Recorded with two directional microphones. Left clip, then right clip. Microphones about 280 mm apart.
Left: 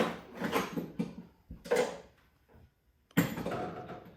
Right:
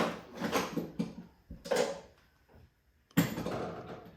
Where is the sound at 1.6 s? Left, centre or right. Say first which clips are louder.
Left 1 dB; centre.